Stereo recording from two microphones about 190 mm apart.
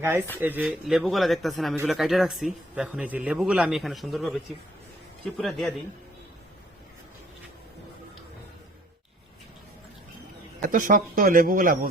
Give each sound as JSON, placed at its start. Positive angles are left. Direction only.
{"t": 0.0, "sound": "speech", "side_deg": -10}
{"t": 10.6, "sound": "speech", "side_deg": -45}